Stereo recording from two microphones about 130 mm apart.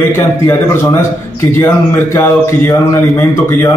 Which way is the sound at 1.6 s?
20° left (ahead or behind).